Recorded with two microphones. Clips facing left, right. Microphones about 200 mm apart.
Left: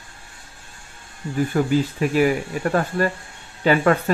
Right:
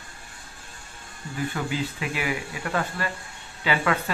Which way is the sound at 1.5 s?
45° left (ahead or behind).